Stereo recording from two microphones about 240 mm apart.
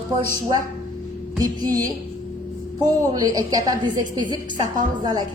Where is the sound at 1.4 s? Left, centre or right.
Centre.